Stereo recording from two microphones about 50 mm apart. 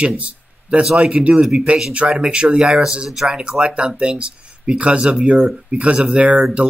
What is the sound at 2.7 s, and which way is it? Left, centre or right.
Speech, centre.